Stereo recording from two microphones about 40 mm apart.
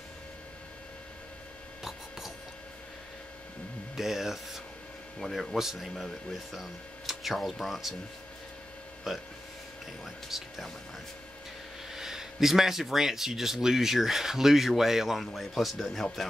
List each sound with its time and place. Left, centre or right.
1.8 s a sound: centre
3.9 s speech: centre
9.1 s speech: centre
10.3 s speech: centre
11.9 s speech: centre